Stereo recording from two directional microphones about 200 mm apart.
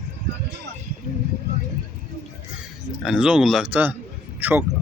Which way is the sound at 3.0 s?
5° right (ahead or behind).